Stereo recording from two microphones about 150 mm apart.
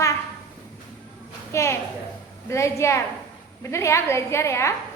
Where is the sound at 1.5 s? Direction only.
20° left (ahead or behind).